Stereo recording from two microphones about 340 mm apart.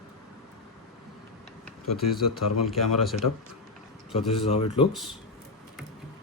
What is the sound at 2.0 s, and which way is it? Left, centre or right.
Speech, left.